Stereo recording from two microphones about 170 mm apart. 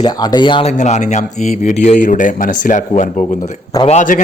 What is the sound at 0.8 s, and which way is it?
A man's voice, 45° left (ahead or behind).